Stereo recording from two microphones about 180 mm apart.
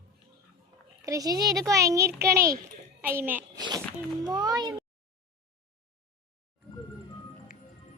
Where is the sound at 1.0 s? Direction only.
20° right (ahead or behind).